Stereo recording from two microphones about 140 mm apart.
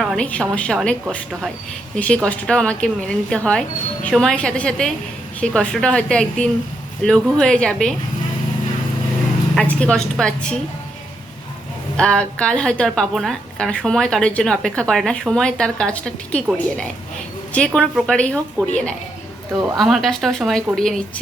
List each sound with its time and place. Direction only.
0.0 s a woman's voice: centre (ahead or behind)
9.6 s a woman's voice: 5° left (ahead or behind)
11.9 s a woman's voice: 5° left (ahead or behind)
17.5 s a woman's voice: 5° left (ahead or behind)